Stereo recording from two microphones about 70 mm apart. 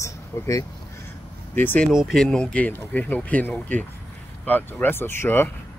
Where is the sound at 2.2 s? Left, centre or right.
Centre.